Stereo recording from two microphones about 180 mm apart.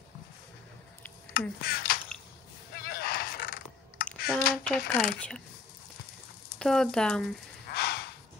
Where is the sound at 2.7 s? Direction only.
55° left (ahead or behind).